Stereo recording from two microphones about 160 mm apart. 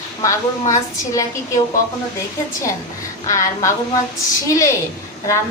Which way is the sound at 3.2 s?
20° left (ahead or behind).